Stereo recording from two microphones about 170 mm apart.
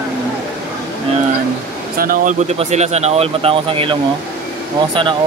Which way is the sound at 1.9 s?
55° right (ahead or behind).